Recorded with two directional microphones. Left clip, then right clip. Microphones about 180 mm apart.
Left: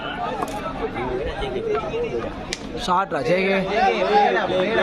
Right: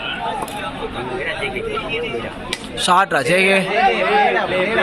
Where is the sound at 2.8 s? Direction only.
Centre (ahead or behind).